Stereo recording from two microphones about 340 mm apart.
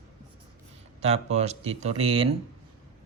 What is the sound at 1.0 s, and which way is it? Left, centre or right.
Speech, centre.